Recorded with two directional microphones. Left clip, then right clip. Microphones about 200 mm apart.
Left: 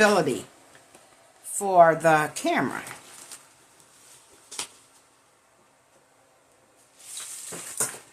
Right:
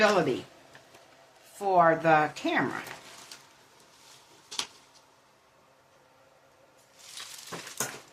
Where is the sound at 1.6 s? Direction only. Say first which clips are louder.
Left 5 dB; 45° left (ahead or behind).